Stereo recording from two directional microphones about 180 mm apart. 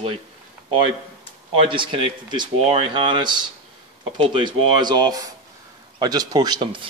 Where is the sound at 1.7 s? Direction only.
30° right (ahead or behind).